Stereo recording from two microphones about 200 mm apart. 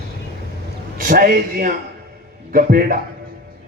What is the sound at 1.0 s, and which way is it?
Speech, 45° right (ahead or behind).